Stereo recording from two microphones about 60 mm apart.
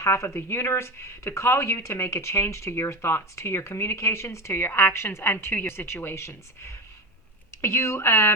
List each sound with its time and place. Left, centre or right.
0.0 s speech: left
8.0 s speech: left